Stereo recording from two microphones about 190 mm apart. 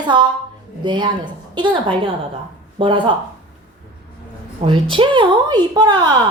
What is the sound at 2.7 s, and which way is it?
Speech, 25° right (ahead or behind).